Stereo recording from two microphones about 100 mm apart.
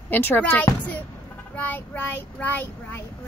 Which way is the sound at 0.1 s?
20° left (ahead or behind).